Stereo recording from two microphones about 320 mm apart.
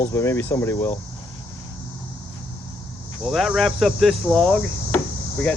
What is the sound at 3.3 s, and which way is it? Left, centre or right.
Speech, centre.